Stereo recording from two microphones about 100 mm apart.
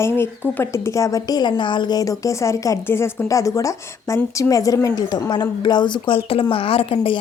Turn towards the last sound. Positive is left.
turn(degrees=65)  # may be behind; listen again after turning